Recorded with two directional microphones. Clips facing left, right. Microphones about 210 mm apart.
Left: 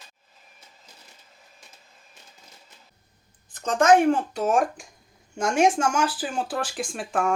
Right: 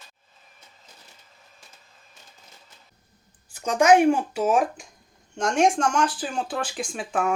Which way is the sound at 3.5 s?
10° right (ahead or behind).